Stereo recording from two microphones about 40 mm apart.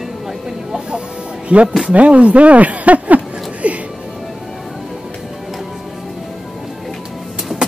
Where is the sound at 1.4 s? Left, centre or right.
Right.